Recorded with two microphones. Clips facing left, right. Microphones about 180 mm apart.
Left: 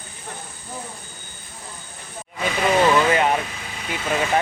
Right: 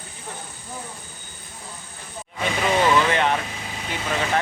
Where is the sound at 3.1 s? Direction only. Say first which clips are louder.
Left 2 dB; 5° left (ahead or behind).